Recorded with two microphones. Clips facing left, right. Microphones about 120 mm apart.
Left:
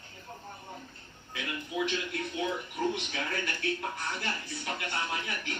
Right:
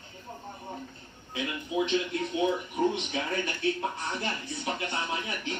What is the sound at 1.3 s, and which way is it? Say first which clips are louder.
Speech: right 5 dB; 25° right (ahead or behind).